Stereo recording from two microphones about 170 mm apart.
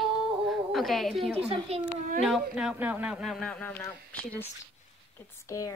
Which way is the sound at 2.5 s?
5° right (ahead or behind).